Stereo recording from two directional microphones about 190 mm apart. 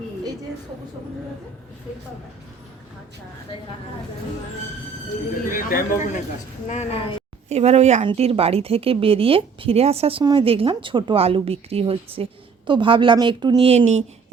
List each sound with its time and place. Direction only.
5.5 s speech: 45° left (ahead or behind)
6.7 s a woman's voice: 35° left (ahead or behind)
7.5 s speech: 35° right (ahead or behind)